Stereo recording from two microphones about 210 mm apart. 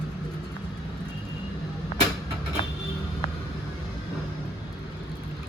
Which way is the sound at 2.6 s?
25° left (ahead or behind).